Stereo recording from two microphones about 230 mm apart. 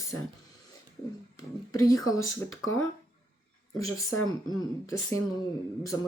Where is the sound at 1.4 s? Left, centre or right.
Centre.